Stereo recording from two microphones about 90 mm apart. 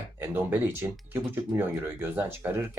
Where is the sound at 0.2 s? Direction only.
25° right (ahead or behind).